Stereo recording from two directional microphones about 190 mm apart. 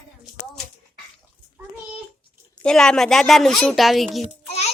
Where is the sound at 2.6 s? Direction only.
5° left (ahead or behind).